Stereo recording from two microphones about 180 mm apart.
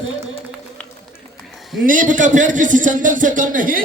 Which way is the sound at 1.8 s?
45° right (ahead or behind).